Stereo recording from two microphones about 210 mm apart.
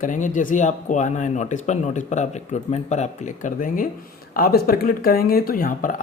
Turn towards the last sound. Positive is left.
turn(degrees=40)  # may be behind; listen again after turning